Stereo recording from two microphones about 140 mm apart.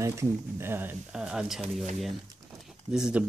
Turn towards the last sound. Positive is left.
turn(degrees=-5)  # may be behind; listen again after turning